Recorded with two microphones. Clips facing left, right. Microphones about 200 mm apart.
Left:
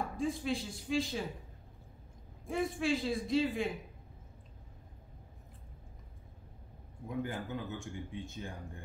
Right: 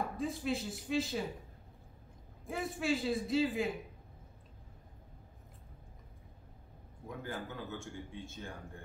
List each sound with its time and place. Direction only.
0.2 s speech: centre (ahead or behind)
2.4 s speech: centre (ahead or behind)
7.1 s a man's voice: 15° left (ahead or behind)